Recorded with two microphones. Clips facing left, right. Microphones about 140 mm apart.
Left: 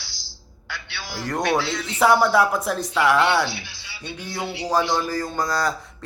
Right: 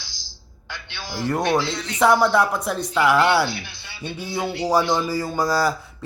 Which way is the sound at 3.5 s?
50° right (ahead or behind).